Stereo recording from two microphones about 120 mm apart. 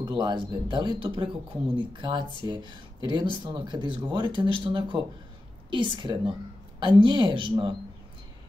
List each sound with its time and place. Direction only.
0.0 s speech: 35° right (ahead or behind)